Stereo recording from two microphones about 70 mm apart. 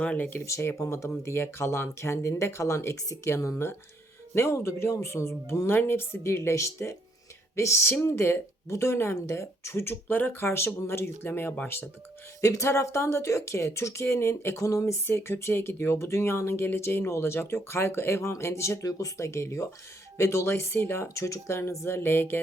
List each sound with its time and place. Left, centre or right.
0.0 s speech: centre
0.4 s speech: left
12.4 s speech: left